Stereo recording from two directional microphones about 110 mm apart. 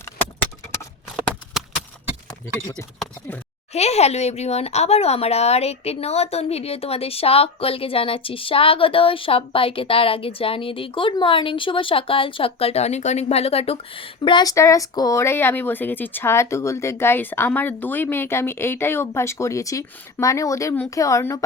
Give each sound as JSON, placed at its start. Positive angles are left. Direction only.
{"t": 2.7, "sound": "speech", "side_deg": 10}
{"t": 3.7, "sound": "speech", "side_deg": 75}
{"t": 14.5, "sound": "speech", "side_deg": 30}